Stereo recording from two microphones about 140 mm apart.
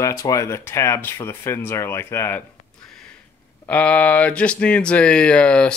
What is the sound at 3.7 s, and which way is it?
Speech, 10° left (ahead or behind).